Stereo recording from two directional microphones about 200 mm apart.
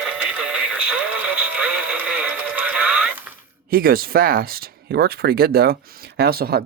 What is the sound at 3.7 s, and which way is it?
Speech, 45° right (ahead or behind).